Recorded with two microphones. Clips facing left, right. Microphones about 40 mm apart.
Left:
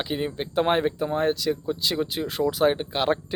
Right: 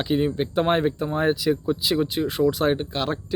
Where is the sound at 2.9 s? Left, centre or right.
Centre.